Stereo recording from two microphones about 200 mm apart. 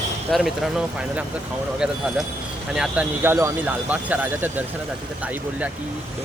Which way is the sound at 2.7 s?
5° right (ahead or behind).